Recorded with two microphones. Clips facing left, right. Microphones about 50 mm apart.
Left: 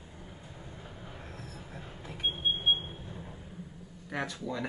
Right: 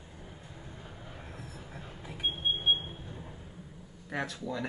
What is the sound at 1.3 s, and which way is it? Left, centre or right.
Train, centre.